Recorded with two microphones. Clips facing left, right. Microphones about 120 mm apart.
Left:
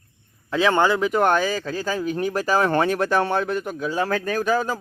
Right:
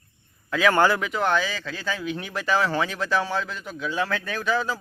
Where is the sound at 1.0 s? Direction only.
45° left (ahead or behind).